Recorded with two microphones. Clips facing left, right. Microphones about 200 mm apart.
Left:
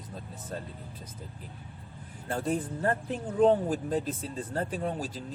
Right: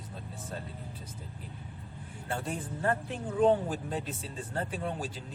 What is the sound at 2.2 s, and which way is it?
Speech, 40° left (ahead or behind).